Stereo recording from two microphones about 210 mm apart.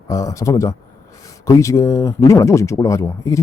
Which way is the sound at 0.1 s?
15° left (ahead or behind).